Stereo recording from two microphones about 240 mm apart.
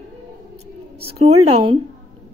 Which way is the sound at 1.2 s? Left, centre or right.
Right.